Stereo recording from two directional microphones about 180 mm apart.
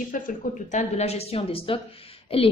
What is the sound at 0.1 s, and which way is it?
A woman's voice, 50° left (ahead or behind).